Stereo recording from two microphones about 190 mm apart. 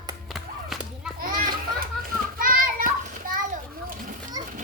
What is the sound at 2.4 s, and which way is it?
Children playing, 45° right (ahead or behind).